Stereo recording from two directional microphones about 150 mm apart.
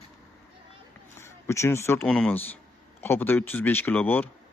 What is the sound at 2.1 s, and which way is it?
Speech, 5° left (ahead or behind).